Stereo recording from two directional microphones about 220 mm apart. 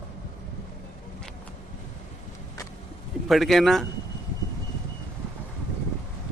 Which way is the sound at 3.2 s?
Centre (ahead or behind).